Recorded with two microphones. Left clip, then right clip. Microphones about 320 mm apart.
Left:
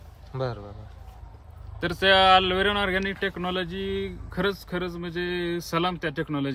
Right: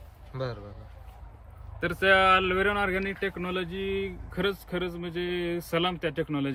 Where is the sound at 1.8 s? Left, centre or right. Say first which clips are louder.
Left 3 dB; left.